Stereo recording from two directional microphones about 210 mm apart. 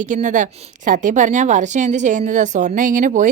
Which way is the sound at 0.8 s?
35° right (ahead or behind).